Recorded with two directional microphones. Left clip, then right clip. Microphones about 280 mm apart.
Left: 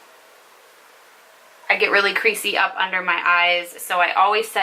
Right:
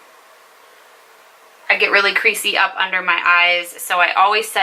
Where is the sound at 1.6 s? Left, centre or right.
Centre.